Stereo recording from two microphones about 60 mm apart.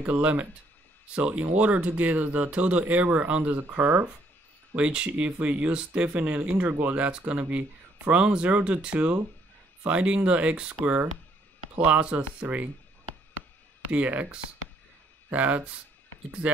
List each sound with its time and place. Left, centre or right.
0.0 s speech: right
4.7 s speech: centre
11.8 s speech: right
13.9 s speech: right